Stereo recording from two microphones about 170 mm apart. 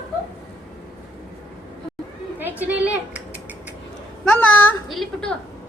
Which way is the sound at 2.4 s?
10° right (ahead or behind).